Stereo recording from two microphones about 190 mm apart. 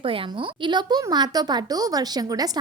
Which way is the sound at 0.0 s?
30° right (ahead or behind).